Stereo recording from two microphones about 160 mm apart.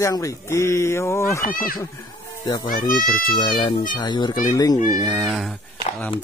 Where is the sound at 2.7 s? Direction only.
60° left (ahead or behind).